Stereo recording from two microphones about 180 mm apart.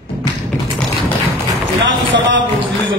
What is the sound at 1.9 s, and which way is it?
Speech, 90° right.